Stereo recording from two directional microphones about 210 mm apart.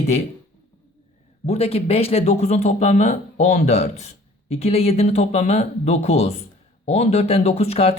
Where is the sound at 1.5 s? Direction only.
30° left (ahead or behind).